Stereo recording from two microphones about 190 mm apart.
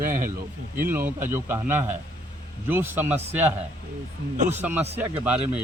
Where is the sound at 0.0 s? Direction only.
45° right (ahead or behind).